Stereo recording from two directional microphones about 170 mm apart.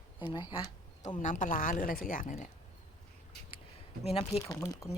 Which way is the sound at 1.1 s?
50° left (ahead or behind).